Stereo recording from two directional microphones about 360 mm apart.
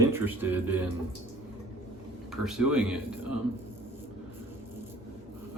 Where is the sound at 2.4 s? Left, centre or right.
Centre.